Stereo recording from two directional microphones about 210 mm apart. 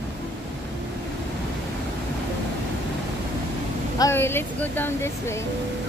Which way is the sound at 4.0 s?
10° left (ahead or behind).